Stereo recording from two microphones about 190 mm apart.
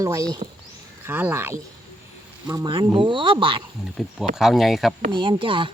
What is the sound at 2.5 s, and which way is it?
Speech, 20° right (ahead or behind).